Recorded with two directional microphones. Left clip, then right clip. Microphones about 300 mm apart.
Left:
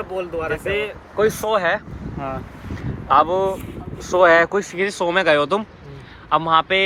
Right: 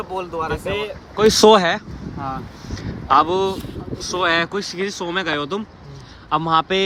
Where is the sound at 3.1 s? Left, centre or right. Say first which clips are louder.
Even; centre.